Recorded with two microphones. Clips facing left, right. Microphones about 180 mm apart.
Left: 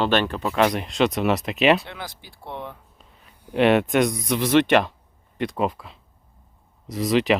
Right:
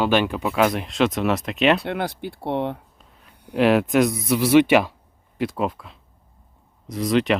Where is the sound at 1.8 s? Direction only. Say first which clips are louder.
Right 11 dB; 60° right (ahead or behind).